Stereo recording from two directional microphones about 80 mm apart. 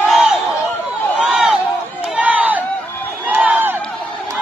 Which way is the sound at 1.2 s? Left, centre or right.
Centre.